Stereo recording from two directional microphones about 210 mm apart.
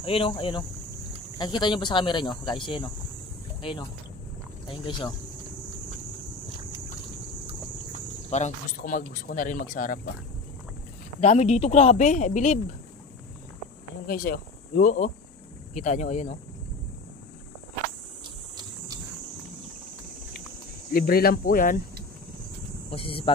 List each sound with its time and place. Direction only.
0.0 s speech: 25° left (ahead or behind)
4.6 s speech: 25° left (ahead or behind)
8.3 s speech: 35° left (ahead or behind)
11.1 s speech: 30° left (ahead or behind)
14.0 s speech: 45° left (ahead or behind)
20.9 s speech: 45° left (ahead or behind)
22.8 s speech: 25° left (ahead or behind)